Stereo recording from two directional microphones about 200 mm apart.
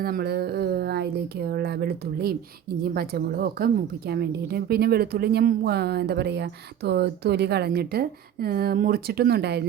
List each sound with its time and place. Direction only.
0.0 s a woman's voice: 50° right (ahead or behind)